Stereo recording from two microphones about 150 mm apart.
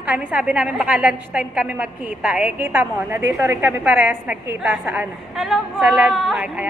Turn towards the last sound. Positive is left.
turn(degrees=-5)  # may be behind; listen again after turning